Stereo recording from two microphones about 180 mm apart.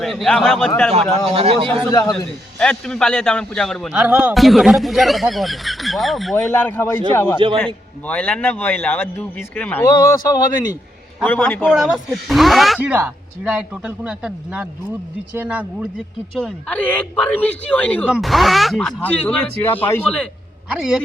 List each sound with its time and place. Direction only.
0.0 s a man's voice: centre (ahead or behind)
0.9 s a man's voice: 35° right (ahead or behind)
1.9 s speech: 20° left (ahead or behind)
2.1 s a man's voice: 5° left (ahead or behind)
6.5 s a man's voice: 10° left (ahead or behind)
7.3 s a man's voice: 30° right (ahead or behind)
7.6 s a man's voice: 5° left (ahead or behind)
11.4 s a man's voice: 10° left (ahead or behind)
11.7 s a man's voice: 5° right (ahead or behind)
16.7 s a man's voice: 10° left (ahead or behind)
20.7 s a man's voice: 5° right (ahead or behind)